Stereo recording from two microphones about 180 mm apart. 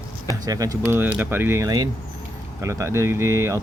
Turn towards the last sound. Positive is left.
turn(degrees=-15)  # may be behind; listen again after turning